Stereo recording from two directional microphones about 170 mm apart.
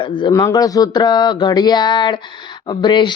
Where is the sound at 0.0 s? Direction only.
25° left (ahead or behind).